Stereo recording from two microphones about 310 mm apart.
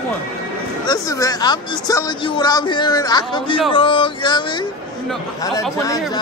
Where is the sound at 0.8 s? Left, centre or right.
Centre.